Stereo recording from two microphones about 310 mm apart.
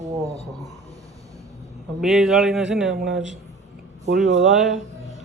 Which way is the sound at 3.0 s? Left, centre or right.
Right.